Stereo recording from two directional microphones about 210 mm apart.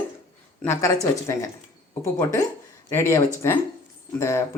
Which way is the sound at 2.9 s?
10° left (ahead or behind).